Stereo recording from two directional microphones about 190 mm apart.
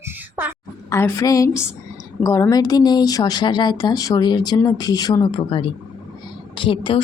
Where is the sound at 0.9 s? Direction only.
15° left (ahead or behind).